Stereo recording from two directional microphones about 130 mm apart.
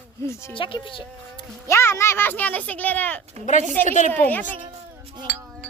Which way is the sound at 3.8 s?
75° left (ahead or behind).